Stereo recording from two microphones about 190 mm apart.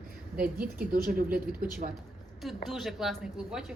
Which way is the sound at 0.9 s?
50° right (ahead or behind).